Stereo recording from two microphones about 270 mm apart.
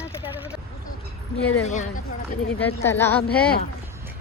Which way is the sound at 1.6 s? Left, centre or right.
Left.